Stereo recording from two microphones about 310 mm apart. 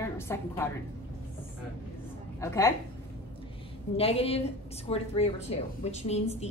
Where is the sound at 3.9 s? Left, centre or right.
Centre.